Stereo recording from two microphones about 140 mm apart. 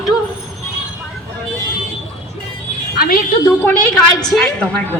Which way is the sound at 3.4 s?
15° left (ahead or behind).